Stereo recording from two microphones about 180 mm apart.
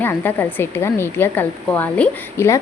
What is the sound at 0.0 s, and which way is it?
Speech, 10° left (ahead or behind).